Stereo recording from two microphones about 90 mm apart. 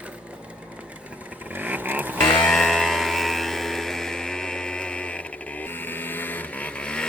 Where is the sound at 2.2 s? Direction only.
15° left (ahead or behind).